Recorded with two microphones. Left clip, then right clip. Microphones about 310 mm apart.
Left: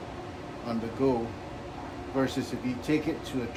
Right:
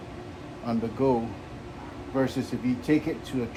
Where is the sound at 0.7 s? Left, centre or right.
Right.